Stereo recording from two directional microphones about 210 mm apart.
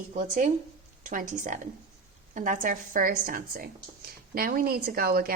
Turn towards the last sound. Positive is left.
turn(degrees=-45)  # may be behind; listen again after turning